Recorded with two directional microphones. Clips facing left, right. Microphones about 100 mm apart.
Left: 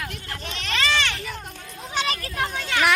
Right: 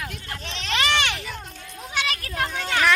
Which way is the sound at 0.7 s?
15° right (ahead or behind).